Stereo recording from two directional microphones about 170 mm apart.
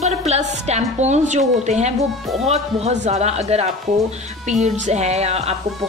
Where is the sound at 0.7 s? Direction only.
40° right (ahead or behind).